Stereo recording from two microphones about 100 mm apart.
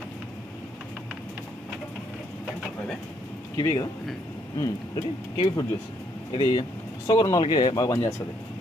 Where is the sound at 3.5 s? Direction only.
30° left (ahead or behind).